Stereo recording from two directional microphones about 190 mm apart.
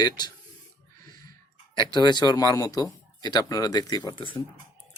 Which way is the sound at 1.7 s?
25° left (ahead or behind).